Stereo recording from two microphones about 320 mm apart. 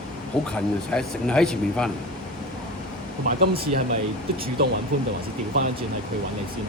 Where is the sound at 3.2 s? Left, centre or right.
Right.